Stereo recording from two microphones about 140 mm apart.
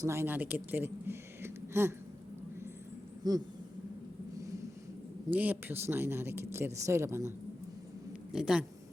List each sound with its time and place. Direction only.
0.0 s speech: 20° right (ahead or behind)
3.2 s a sound: 30° right (ahead or behind)
5.3 s speech: 10° right (ahead or behind)
8.3 s speech: 5° right (ahead or behind)